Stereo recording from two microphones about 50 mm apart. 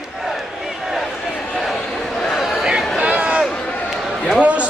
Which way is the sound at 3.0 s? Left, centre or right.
Right.